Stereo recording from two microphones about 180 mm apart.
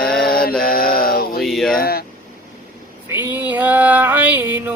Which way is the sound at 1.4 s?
Centre (ahead or behind).